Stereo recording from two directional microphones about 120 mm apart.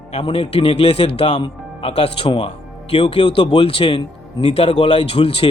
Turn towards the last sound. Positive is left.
turn(degrees=50)  # may be behind; listen again after turning